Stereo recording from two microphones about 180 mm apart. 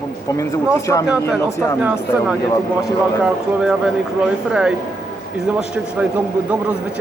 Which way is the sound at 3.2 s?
5° right (ahead or behind).